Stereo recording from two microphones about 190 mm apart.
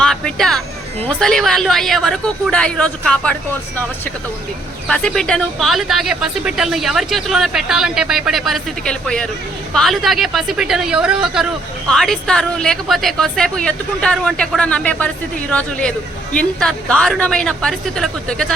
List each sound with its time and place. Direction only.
0.0 s a sound: 5° left (ahead or behind)
1.0 s a woman's voice: 5° left (ahead or behind)
4.9 s a woman's voice: 5° left (ahead or behind)